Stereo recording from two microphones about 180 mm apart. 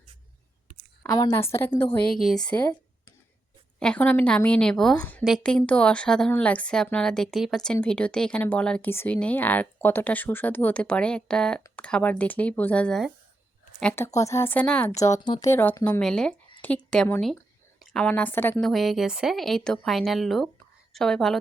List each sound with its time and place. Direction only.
1.1 s speech: 20° left (ahead or behind)
2.1 s a woman's voice: centre (ahead or behind)
3.8 s a woman's voice: 5° left (ahead or behind)
14.9 s speech: 20° left (ahead or behind)
18.7 s a woman's voice: centre (ahead or behind)